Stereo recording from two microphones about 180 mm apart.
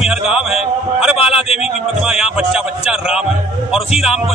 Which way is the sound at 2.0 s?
5° right (ahead or behind).